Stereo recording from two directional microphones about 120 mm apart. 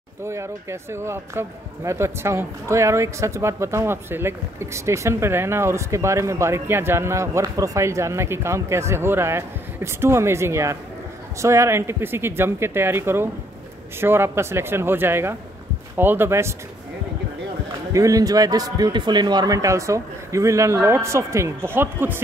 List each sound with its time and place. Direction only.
0.2 s speech: 25° right (ahead or behind)
17.9 s speech: 30° right (ahead or behind)